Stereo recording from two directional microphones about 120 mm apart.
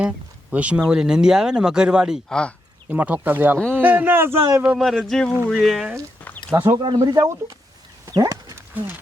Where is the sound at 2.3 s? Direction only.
5° left (ahead or behind).